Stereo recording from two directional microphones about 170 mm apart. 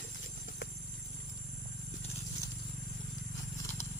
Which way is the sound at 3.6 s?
15° left (ahead or behind).